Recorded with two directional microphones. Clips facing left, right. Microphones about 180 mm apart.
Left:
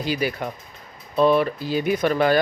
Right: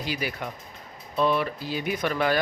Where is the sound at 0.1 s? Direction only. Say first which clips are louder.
Left 7 dB; 35° left (ahead or behind).